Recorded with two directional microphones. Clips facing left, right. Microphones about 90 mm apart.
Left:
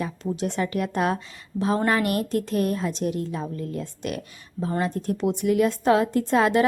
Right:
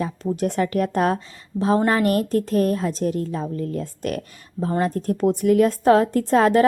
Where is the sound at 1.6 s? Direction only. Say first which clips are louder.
Right 3 dB; 30° right (ahead or behind).